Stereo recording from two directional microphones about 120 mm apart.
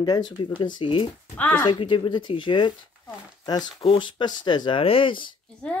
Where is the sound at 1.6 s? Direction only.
45° left (ahead or behind).